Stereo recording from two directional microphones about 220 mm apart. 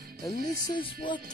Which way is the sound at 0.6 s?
20° left (ahead or behind).